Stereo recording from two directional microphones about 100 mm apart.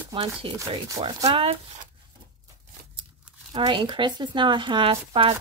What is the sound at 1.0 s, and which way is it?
Speech, 70° right (ahead or behind).